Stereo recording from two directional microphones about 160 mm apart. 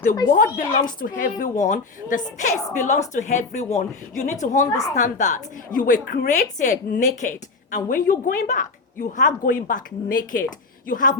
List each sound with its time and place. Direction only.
0.3 s a woman's voice: 65° left (ahead or behind)